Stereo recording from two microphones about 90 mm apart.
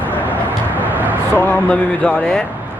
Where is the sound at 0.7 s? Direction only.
20° right (ahead or behind).